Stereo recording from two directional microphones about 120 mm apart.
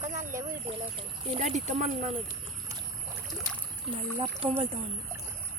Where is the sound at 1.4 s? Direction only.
75° right (ahead or behind).